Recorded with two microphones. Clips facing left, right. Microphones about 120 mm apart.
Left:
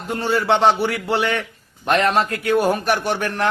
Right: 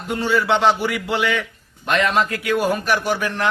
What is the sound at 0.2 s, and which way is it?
A man's voice, 35° left (ahead or behind).